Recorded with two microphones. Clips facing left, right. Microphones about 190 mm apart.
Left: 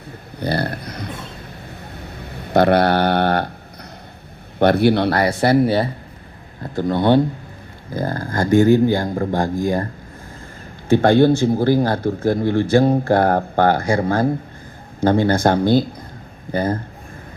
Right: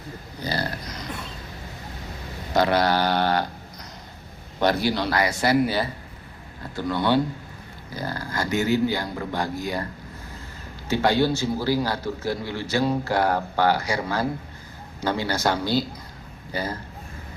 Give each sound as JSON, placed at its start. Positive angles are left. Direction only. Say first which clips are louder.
{"t": 0.3, "sound": "speech", "louder": "left 7 dB", "side_deg": 60}
{"t": 1.6, "sound": "a sound", "louder": "left 3 dB", "side_deg": 60}
{"t": 4.6, "sound": "speech", "louder": "left 8 dB", "side_deg": 60}
{"t": 5.5, "sound": "speech", "louder": "left 6 dB", "side_deg": 25}
{"t": 6.6, "sound": "speech", "louder": "left 7 dB", "side_deg": 55}